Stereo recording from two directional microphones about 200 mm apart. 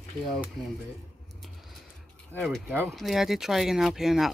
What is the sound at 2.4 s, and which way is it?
Speech, 5° right (ahead or behind).